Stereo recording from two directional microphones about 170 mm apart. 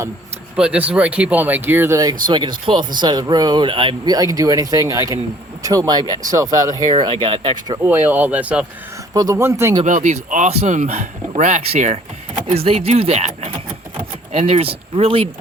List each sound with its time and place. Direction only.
0.5 s speech: 5° right (ahead or behind)
7.0 s speech: 35° right (ahead or behind)
7.8 s speech: 10° right (ahead or behind)
9.1 s speech: 20° right (ahead or behind)
9.8 s speech: 45° right (ahead or behind)